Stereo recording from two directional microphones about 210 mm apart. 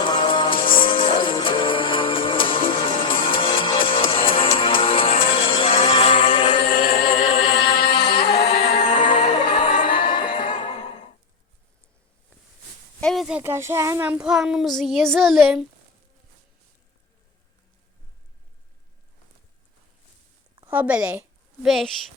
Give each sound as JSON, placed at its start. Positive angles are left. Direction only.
{"t": 0.0, "sound": "music", "side_deg": 20}
{"t": 6.7, "sound": "chant", "side_deg": 45}
{"t": 7.0, "sound": "music", "side_deg": 25}
{"t": 8.4, "sound": "music", "side_deg": 30}
{"t": 9.0, "sound": "music", "side_deg": 20}
{"t": 10.1, "sound": "neigh", "side_deg": 20}
{"t": 13.0, "sound": "child singing", "side_deg": 0}
{"t": 20.6, "sound": "a woman's voice", "side_deg": -10}